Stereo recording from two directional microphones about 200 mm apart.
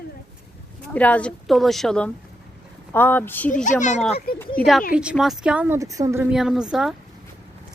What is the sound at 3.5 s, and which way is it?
Speech, 40° left (ahead or behind).